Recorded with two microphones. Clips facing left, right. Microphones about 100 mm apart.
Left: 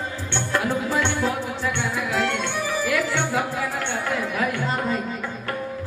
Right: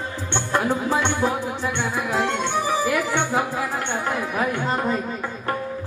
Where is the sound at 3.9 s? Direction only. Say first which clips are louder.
Right 1 dB; 20° right (ahead or behind).